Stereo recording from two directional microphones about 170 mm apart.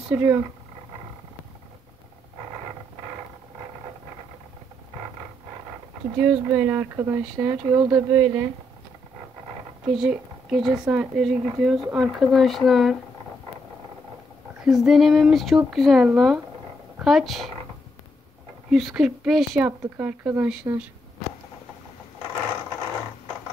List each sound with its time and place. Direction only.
0.1 s speech: 10° right (ahead or behind)
6.1 s speech: 10° right (ahead or behind)
9.9 s speech: 5° right (ahead or behind)
14.6 s speech: centre (ahead or behind)
18.7 s speech: centre (ahead or behind)